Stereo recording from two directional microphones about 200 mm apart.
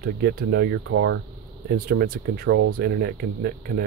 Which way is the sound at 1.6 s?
50° right (ahead or behind).